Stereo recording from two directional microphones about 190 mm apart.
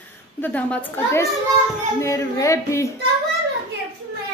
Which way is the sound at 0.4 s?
10° left (ahead or behind).